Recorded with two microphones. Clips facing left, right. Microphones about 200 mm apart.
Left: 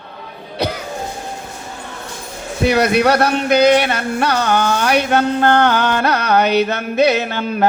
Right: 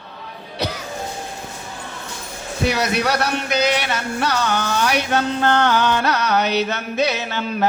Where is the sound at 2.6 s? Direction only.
55° left (ahead or behind).